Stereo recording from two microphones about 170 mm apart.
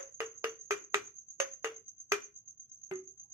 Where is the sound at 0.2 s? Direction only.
15° right (ahead or behind).